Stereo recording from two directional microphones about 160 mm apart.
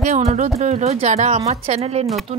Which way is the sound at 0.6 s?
45° right (ahead or behind).